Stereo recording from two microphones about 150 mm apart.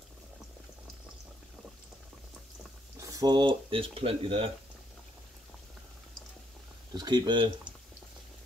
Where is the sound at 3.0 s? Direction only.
25° right (ahead or behind); by 4.5 s 40° right (ahead or behind).